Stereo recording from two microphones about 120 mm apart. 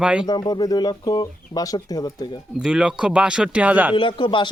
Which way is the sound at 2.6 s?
5° right (ahead or behind).